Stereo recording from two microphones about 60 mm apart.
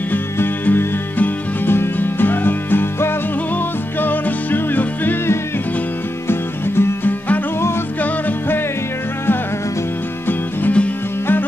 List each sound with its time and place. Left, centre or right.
0.1 s music: left
6.2 s music: left
8.0 s music: left